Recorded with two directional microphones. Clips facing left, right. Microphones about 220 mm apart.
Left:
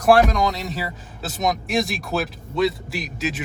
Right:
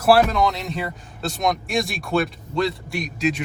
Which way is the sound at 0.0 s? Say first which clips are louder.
Even; 5° right (ahead or behind).